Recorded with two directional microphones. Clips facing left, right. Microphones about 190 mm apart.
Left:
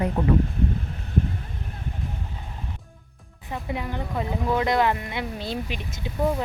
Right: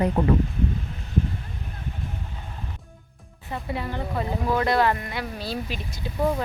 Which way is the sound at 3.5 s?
15° left (ahead or behind).